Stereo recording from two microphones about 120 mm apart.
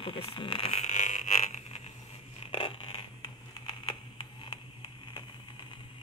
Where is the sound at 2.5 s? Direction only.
50° left (ahead or behind).